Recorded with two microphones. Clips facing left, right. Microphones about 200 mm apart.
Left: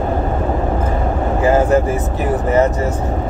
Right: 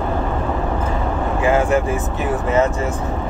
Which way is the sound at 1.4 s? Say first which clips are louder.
Left 3 dB; 40° left (ahead or behind).